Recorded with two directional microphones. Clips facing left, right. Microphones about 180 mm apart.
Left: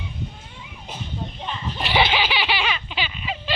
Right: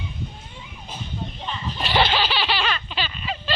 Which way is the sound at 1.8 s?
15° left (ahead or behind).